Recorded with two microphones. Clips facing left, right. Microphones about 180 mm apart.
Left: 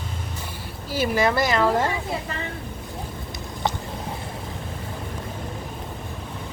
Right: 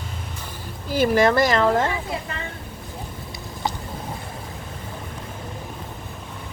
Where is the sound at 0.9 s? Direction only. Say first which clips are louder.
Right 5 dB; 50° right (ahead or behind).